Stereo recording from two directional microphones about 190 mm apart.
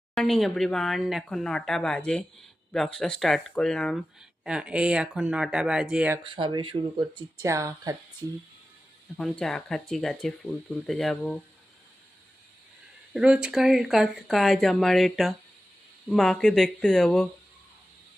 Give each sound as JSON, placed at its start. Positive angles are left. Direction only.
{"t": 0.1, "sound": "speech", "side_deg": 0}
{"t": 6.2, "sound": "speech", "side_deg": -25}
{"t": 9.1, "sound": "speech", "side_deg": 5}
{"t": 13.1, "sound": "speech", "side_deg": -5}